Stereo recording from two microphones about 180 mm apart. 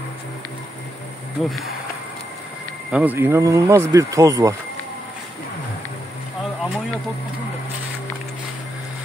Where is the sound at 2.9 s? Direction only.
10° right (ahead or behind).